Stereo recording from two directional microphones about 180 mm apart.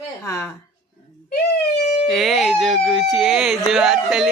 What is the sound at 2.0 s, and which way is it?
Speech, centre (ahead or behind).